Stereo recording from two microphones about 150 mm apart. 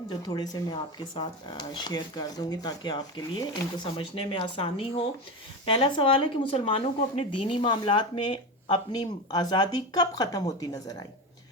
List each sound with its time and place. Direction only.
0.1 s speech: 30° left (ahead or behind)